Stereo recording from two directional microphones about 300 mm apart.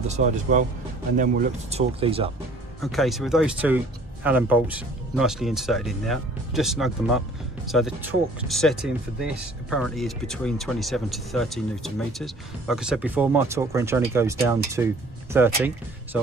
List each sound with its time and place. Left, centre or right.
0.1 s speech: right
2.8 s speech: centre